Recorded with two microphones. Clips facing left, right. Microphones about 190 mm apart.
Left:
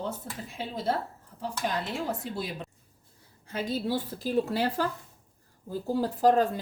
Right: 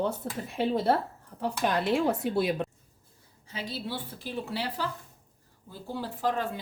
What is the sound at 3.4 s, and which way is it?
A woman's voice, 50° left (ahead or behind).